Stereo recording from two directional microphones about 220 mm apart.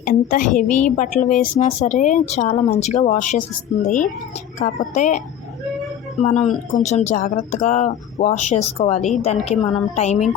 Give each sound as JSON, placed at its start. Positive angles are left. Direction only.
{"t": 0.0, "sound": "a woman's voice", "side_deg": 35}
{"t": 6.2, "sound": "a woman's voice", "side_deg": 30}